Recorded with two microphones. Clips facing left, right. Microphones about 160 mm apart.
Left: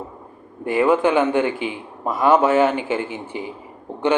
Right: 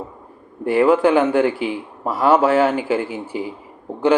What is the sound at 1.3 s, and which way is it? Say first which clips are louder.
Speech: right 3 dB; 20° left (ahead or behind).